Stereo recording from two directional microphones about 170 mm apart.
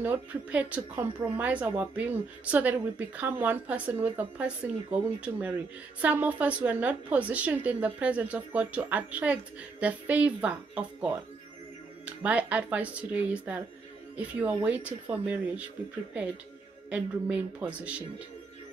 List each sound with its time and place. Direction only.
0.0 s speech: 10° right (ahead or behind)
12.2 s speech: 10° right (ahead or behind)
16.9 s speech: 10° right (ahead or behind)